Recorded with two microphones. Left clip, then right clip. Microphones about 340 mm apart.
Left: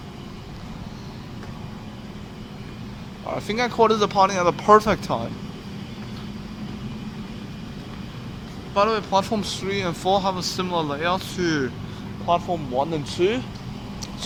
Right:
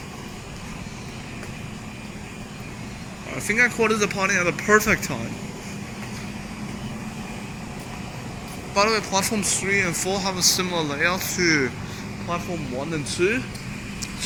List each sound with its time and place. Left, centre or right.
3.4 s speech: centre
8.7 s speech: centre
12.9 s speech: centre